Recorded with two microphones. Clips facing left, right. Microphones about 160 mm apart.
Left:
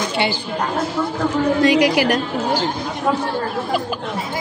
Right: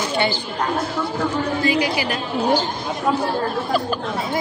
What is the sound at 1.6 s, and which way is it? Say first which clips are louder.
Speech: left 7 dB; 75° left (ahead or behind).